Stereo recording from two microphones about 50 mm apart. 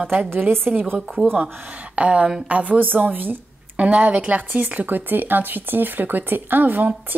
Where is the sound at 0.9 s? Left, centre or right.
Centre.